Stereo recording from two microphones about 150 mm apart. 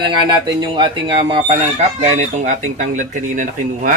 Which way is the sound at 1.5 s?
50° right (ahead or behind).